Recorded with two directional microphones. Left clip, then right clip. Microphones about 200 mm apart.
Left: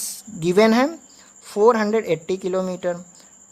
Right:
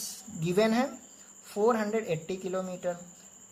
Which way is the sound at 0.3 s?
45° left (ahead or behind).